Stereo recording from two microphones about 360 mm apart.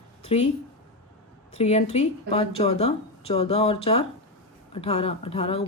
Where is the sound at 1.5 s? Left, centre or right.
Centre.